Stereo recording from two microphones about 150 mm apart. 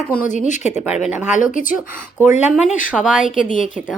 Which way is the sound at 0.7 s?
5° right (ahead or behind).